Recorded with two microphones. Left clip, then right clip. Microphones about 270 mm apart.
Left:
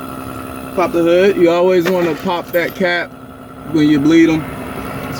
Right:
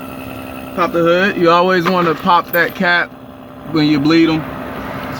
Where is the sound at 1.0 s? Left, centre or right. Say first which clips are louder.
Left 2 dB; centre.